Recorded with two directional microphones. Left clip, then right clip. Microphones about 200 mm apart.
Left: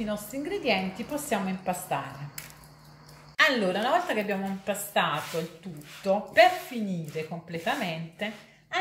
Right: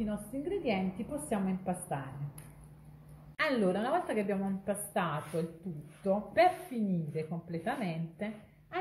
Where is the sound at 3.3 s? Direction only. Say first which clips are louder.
Left 7 dB; 15° right (ahead or behind).